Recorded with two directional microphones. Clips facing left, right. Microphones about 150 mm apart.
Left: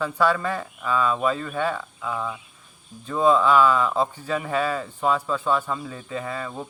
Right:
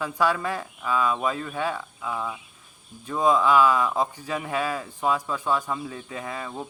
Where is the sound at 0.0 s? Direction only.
15° right (ahead or behind).